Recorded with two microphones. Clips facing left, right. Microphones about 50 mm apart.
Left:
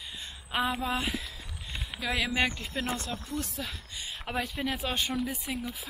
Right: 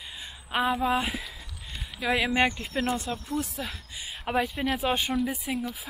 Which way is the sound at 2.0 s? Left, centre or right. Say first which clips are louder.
Right 5 dB; centre.